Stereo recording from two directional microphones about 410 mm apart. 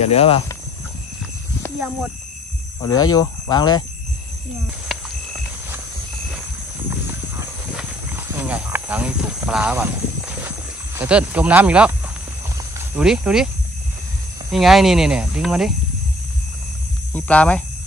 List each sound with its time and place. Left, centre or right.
0.0 s speech: centre
2.8 s speech: centre
7.1 s horse: centre
11.0 s speech: centre
12.9 s speech: centre
14.5 s speech: centre
17.1 s speech: centre